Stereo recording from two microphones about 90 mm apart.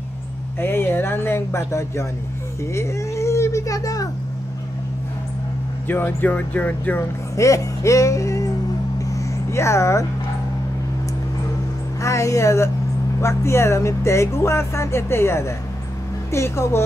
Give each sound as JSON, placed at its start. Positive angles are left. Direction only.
{"t": 0.6, "sound": "speech", "side_deg": 25}
{"t": 5.9, "sound": "speech", "side_deg": 25}
{"t": 7.3, "sound": "speech", "side_deg": 35}
{"t": 9.1, "sound": "a sound", "side_deg": 30}
{"t": 12.0, "sound": "speech", "side_deg": 35}